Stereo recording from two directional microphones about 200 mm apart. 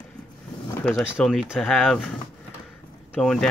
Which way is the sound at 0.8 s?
5° right (ahead or behind).